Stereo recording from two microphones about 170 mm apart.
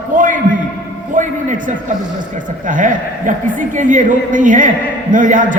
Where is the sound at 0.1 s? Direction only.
50° right (ahead or behind).